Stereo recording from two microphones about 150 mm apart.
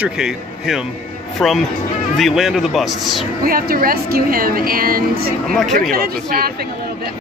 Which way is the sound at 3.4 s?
75° right (ahead or behind).